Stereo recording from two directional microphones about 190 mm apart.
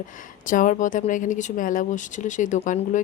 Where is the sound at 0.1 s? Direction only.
45° left (ahead or behind).